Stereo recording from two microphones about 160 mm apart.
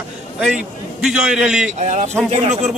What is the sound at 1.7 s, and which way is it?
Speech, 50° right (ahead or behind).